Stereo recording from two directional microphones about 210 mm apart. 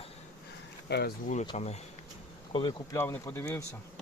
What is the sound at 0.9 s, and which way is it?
Speech, 50° left (ahead or behind).